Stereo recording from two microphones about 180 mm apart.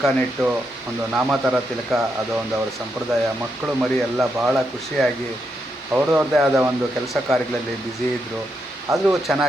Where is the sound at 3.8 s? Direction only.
5° right (ahead or behind).